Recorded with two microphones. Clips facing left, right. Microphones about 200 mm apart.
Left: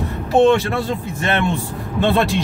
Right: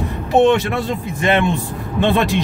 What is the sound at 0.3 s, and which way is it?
Speech, 20° right (ahead or behind).